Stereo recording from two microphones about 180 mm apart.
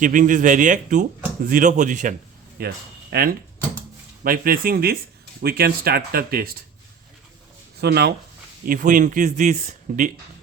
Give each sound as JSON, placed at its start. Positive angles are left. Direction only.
{"t": 0.0, "sound": "speech", "side_deg": -45}
{"t": 2.6, "sound": "speech", "side_deg": -60}
{"t": 7.8, "sound": "speech", "side_deg": -65}
{"t": 8.6, "sound": "speech", "side_deg": -50}